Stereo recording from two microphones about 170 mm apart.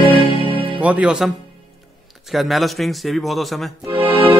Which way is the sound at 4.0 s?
30° right (ahead or behind).